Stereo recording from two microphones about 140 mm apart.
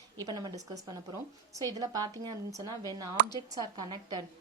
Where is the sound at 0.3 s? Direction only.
30° right (ahead or behind).